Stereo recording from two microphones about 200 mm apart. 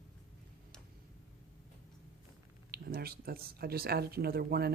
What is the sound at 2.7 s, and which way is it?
Speech, 50° right (ahead or behind).